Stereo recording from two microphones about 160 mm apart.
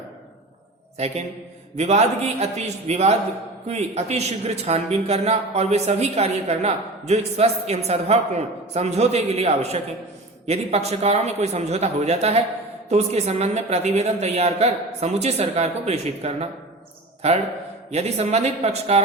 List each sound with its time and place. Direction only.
0.9 s a man's voice: 40° right (ahead or behind)